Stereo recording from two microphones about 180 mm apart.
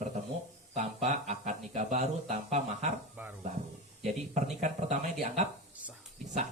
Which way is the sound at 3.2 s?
10° right (ahead or behind).